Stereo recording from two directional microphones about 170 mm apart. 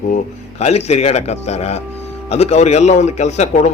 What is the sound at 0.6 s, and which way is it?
A man's voice, 40° left (ahead or behind).